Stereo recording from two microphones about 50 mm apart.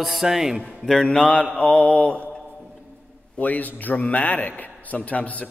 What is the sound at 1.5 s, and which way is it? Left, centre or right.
Speech, left.